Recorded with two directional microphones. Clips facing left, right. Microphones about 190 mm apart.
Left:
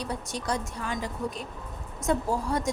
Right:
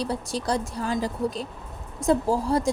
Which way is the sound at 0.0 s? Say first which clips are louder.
Right 5 dB; 30° right (ahead or behind).